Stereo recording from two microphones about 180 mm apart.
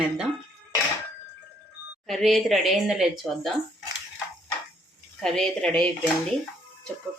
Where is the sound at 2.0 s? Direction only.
Centre (ahead or behind).